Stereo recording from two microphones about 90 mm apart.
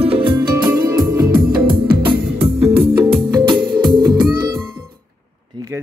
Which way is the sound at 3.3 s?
60° right (ahead or behind).